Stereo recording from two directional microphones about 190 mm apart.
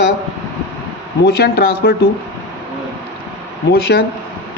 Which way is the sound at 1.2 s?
60° left (ahead or behind).